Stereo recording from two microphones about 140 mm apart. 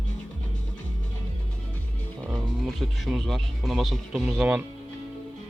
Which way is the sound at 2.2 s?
5° right (ahead or behind).